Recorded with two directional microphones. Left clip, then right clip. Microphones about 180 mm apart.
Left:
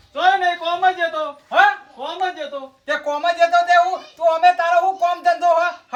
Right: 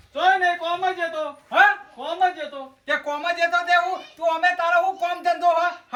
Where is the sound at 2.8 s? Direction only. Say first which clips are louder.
Left 4 dB; 15° left (ahead or behind).